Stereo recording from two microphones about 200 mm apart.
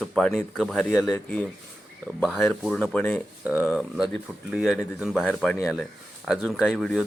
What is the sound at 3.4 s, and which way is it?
Speech, 5° right (ahead or behind).